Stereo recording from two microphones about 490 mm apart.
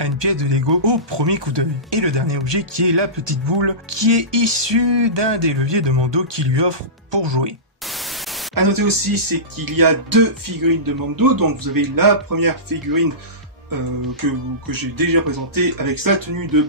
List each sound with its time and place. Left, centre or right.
0.0 s speech: right
8.5 s speech: right
14.7 s speech: right